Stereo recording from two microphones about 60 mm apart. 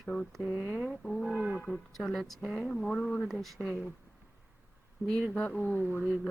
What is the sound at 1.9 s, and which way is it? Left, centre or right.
Speech, centre.